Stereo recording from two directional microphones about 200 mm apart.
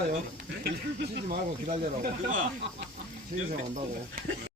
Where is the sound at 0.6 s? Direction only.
55° right (ahead or behind).